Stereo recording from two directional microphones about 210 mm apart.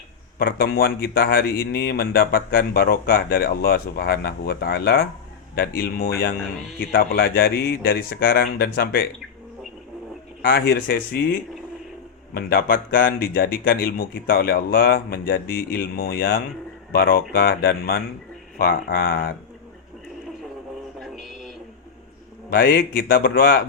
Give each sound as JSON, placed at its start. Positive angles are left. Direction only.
{"t": 0.3, "sound": "speech", "side_deg": 45}
{"t": 10.4, "sound": "speech", "side_deg": 45}
{"t": 21.0, "sound": "music", "side_deg": 0}
{"t": 22.4, "sound": "speech", "side_deg": 45}